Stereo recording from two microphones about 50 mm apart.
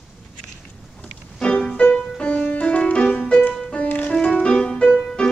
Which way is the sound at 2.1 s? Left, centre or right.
Left.